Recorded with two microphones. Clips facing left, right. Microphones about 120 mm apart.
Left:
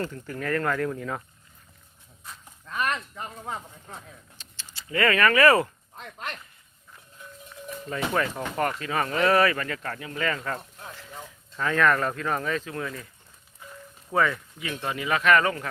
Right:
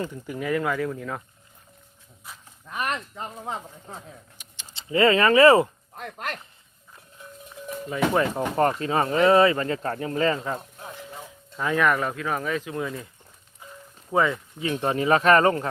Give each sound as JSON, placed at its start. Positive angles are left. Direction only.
{"t": 0.0, "sound": "speech", "side_deg": -15}
{"t": 2.6, "sound": "speech", "side_deg": -20}
{"t": 6.0, "sound": "speech", "side_deg": -55}
{"t": 8.4, "sound": "speech", "side_deg": -30}
{"t": 10.5, "sound": "a sound", "side_deg": -15}
{"t": 11.2, "sound": "speech", "side_deg": -15}
{"t": 13.6, "sound": "a sound", "side_deg": -20}
{"t": 14.1, "sound": "speech", "side_deg": -20}